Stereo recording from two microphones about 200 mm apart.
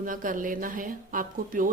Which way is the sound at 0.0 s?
45° right (ahead or behind).